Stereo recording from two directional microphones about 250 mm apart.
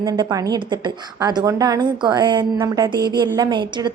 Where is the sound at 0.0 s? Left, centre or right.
Centre.